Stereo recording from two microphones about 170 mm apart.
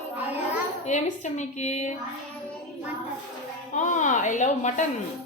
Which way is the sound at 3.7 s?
45° left (ahead or behind).